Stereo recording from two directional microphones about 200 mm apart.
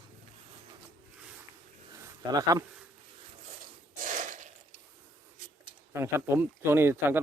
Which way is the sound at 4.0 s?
40° right (ahead or behind).